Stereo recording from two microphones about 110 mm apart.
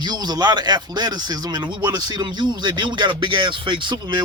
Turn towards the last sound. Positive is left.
turn(degrees=-45)  # may be behind; listen again after turning